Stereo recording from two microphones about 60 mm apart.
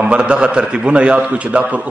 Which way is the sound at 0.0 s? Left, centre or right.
Centre.